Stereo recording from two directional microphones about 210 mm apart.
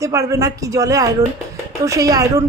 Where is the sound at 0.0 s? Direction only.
15° right (ahead or behind).